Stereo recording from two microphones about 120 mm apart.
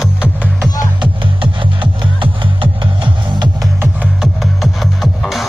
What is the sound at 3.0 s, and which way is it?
Music, 35° right (ahead or behind).